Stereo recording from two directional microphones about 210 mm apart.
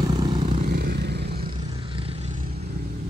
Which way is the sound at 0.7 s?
50° right (ahead or behind).